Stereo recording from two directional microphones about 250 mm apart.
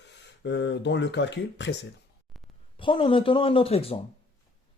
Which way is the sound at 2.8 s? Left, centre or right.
Left.